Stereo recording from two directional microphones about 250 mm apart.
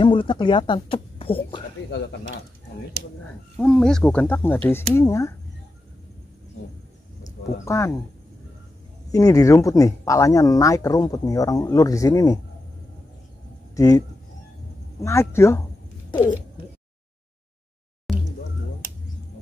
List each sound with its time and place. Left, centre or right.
0.0 s speech: centre
3.5 s speech: centre
7.6 s speech: centre
9.1 s speech: centre
13.7 s speech: centre